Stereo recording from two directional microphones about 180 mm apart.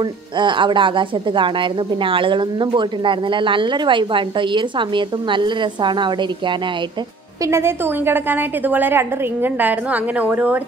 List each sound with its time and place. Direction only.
0.4 s a woman's voice: 25° right (ahead or behind)
7.4 s a woman's voice: 15° right (ahead or behind)